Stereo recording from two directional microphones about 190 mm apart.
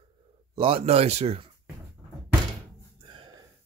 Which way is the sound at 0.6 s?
30° right (ahead or behind).